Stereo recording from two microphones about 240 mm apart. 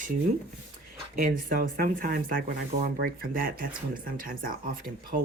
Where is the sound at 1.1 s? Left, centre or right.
Right.